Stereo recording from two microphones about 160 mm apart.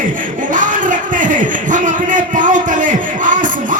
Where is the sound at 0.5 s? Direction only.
55° right (ahead or behind).